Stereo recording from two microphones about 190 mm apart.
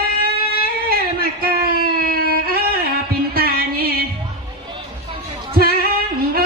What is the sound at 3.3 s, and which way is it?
Music, 50° right (ahead or behind).